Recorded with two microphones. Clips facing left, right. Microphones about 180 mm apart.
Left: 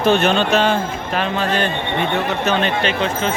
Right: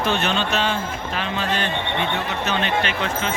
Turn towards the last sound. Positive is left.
turn(degrees=30)  # may be behind; listen again after turning